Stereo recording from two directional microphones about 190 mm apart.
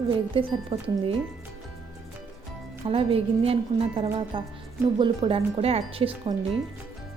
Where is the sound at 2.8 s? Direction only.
30° right (ahead or behind).